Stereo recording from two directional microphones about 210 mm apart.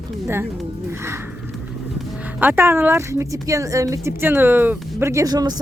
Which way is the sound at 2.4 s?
10° right (ahead or behind).